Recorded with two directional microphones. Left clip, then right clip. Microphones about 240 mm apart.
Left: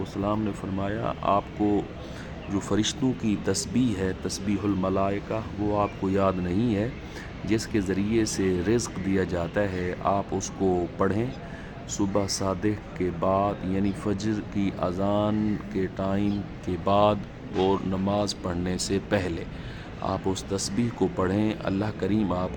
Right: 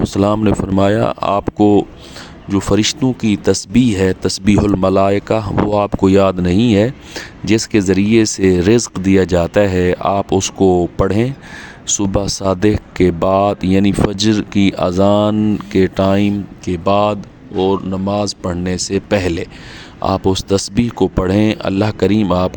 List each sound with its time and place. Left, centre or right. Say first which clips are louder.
0.0 s speech: right 14 dB; right